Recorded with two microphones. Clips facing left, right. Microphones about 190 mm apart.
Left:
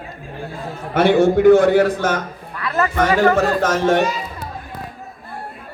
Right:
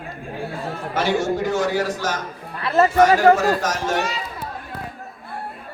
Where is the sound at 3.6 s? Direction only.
60° left (ahead or behind).